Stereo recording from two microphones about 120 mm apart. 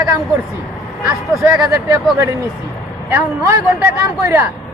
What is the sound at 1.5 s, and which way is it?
Speech, 25° right (ahead or behind).